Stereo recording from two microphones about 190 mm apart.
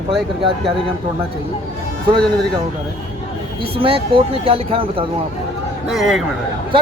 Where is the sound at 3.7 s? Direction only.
30° right (ahead or behind).